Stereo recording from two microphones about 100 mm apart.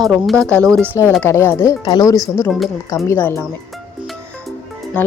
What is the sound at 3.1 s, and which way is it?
Speech, 25° left (ahead or behind).